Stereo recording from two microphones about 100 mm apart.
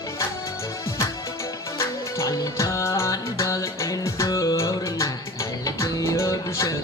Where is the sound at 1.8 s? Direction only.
35° left (ahead or behind).